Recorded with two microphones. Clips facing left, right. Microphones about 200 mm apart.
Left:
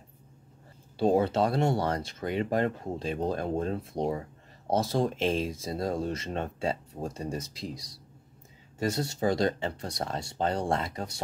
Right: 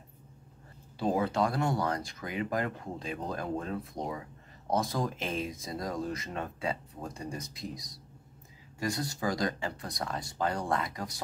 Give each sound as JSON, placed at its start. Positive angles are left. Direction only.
{"t": 0.9, "sound": "speech", "side_deg": 30}
{"t": 8.7, "sound": "speech", "side_deg": 25}